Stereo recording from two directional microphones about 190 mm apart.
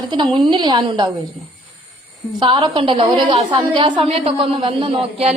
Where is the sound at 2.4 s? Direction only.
25° right (ahead or behind).